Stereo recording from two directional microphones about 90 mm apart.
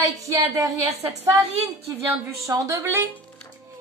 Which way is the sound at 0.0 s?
35° right (ahead or behind).